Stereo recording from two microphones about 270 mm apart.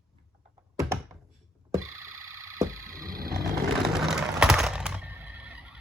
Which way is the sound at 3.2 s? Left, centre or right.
Right.